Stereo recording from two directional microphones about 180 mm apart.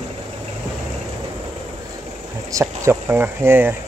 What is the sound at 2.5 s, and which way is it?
Speech, 15° right (ahead or behind).